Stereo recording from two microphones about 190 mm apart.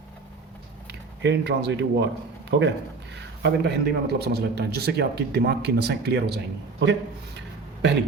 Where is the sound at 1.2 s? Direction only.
65° right (ahead or behind).